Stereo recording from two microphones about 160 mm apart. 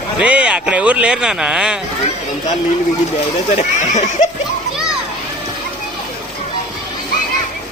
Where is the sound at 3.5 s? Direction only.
45° left (ahead or behind).